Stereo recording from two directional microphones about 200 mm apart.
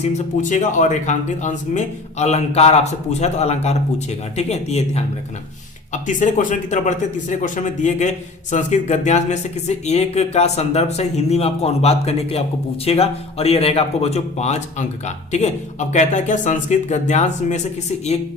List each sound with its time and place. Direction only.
0.0 s speech: 35° left (ahead or behind)